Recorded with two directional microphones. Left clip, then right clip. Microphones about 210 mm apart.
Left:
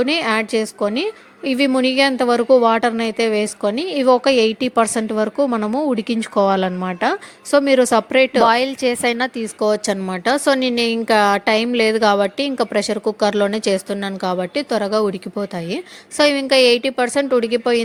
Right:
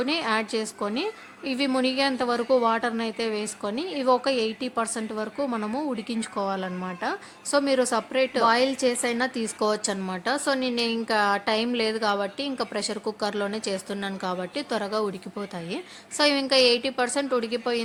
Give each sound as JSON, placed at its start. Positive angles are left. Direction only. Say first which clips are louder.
{"t": 0.0, "sound": "a woman's voice", "louder": "left 8 dB", "side_deg": 30}